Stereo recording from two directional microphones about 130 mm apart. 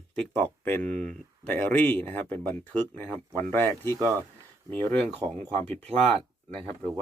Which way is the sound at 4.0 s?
25° right (ahead or behind).